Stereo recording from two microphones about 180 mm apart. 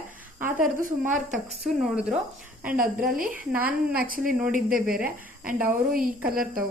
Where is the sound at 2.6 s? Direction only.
50° right (ahead or behind).